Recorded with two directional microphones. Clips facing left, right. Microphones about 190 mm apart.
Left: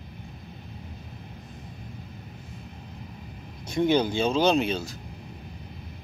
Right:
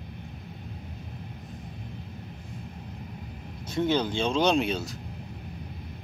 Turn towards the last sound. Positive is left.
turn(degrees=0)  # may be behind; listen again after turning